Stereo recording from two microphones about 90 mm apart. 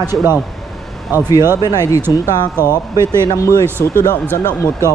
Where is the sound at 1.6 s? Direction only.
45° left (ahead or behind).